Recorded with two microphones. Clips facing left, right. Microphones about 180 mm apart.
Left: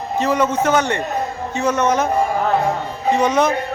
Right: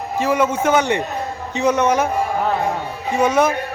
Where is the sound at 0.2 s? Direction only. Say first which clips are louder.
Even; 10° right (ahead or behind).